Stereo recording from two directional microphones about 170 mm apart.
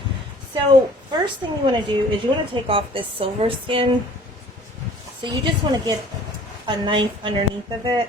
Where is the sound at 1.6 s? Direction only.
30° right (ahead or behind).